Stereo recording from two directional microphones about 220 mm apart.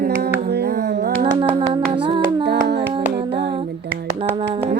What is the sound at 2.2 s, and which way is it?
Music, 45° right (ahead or behind).